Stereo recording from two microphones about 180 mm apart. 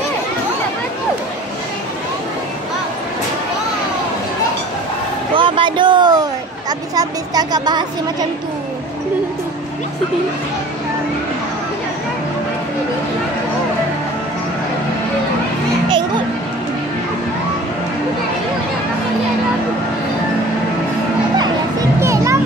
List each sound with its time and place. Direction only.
5.3 s a sound: 25° right (ahead or behind)
7.0 s speech: 20° right (ahead or behind)
22.0 s music: 15° right (ahead or behind)